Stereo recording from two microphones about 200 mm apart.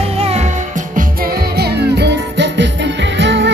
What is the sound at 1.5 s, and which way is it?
Music, 55° right (ahead or behind).